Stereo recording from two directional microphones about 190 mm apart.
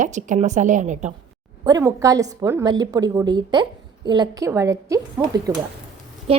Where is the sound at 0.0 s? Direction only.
40° right (ahead or behind).